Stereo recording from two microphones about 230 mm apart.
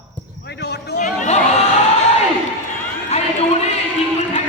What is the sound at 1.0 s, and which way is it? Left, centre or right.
Speech, left.